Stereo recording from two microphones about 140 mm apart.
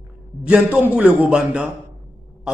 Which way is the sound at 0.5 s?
10° right (ahead or behind).